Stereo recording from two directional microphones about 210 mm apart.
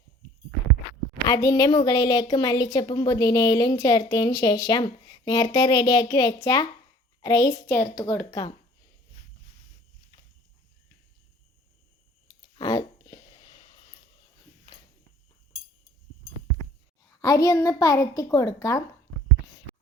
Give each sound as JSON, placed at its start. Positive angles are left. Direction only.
{"t": 1.3, "sound": "a woman's voice", "side_deg": 15}
{"t": 12.5, "sound": "a sound", "side_deg": 20}
{"t": 17.1, "sound": "a woman's voice", "side_deg": 15}